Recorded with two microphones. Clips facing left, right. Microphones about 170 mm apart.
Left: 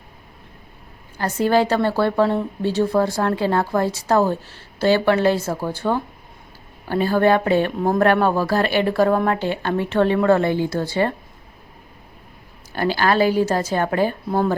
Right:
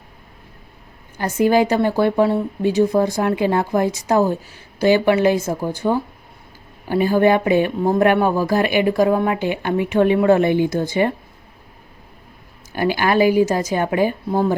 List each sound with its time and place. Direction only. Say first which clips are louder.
1.2 s speech: right 2 dB; 15° right (ahead or behind)
12.7 s speech: right 1 dB; 15° right (ahead or behind)